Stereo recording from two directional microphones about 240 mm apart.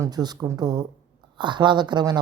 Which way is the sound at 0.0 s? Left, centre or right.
Centre.